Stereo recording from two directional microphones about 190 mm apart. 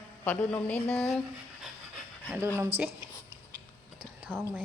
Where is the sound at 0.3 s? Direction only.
10° left (ahead or behind).